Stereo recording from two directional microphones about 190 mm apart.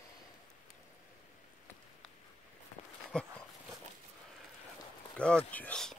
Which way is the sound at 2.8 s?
30° left (ahead or behind).